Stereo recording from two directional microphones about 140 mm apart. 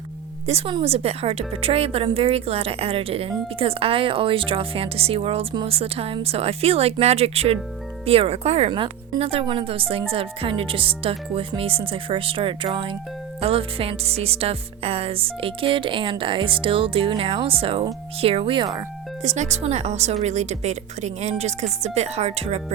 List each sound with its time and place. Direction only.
0.4 s a woman's voice: 50° right (ahead or behind)
19.2 s a woman's voice: 55° right (ahead or behind)